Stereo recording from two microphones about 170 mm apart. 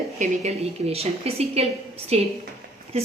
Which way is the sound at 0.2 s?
40° right (ahead or behind).